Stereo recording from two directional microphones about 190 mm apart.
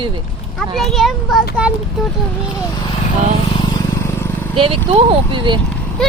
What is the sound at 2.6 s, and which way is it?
Vehicle, 20° left (ahead or behind).